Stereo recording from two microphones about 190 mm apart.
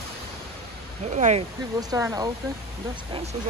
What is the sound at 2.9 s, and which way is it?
Speech, 30° right (ahead or behind).